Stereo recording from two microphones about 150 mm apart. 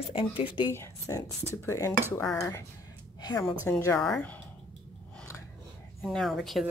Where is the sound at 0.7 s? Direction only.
20° left (ahead or behind).